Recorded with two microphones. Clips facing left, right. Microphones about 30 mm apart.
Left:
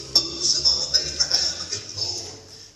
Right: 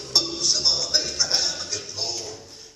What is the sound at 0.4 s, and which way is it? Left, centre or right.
Music, centre.